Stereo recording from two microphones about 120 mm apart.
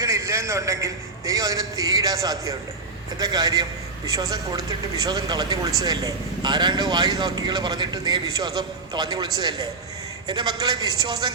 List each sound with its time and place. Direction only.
0.0 s a man's voice: 25° right (ahead or behind)